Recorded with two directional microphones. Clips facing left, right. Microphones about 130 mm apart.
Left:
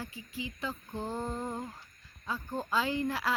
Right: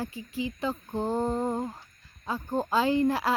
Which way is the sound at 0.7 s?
45° right (ahead or behind).